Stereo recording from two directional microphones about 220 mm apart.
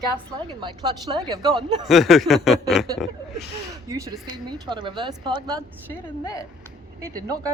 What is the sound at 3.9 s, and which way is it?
Speech, 15° right (ahead or behind).